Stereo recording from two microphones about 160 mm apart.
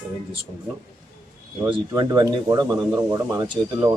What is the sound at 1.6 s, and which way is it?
Speech, 30° right (ahead or behind).